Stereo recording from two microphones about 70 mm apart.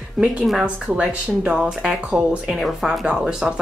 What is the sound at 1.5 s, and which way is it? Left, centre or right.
Speech, centre.